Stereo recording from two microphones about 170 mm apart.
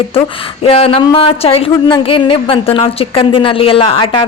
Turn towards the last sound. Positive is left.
turn(degrees=30)  # may be behind; listen again after turning